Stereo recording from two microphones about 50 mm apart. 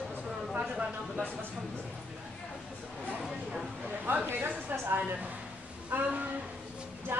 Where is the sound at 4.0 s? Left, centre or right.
Right.